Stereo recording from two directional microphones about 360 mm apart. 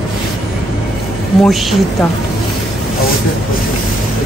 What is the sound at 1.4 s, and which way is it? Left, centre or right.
Speech, centre.